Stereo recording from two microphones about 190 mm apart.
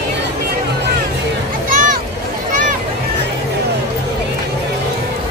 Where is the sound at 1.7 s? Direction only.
45° right (ahead or behind).